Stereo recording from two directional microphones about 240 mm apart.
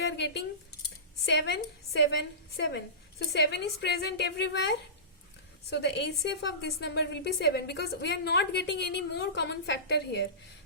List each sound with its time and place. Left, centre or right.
1.2 s a woman's voice: left